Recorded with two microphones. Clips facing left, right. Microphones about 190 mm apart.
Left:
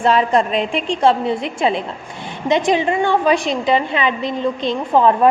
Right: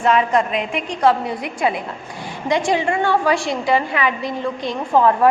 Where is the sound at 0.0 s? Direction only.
30° left (ahead or behind).